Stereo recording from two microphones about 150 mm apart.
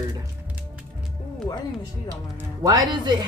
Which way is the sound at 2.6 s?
25° right (ahead or behind).